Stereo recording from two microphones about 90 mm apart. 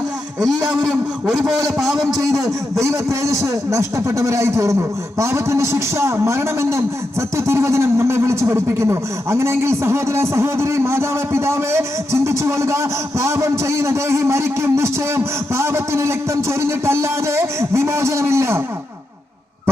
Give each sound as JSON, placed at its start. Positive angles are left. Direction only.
{"t": 0.3, "sound": "a man's voice", "side_deg": 0}
{"t": 2.0, "sound": "a man's voice", "side_deg": -35}